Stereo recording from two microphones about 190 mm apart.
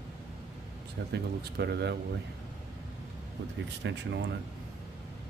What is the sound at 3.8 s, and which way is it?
Speech, 70° right (ahead or behind).